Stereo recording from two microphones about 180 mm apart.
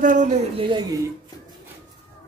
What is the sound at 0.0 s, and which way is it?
Speech, 45° right (ahead or behind).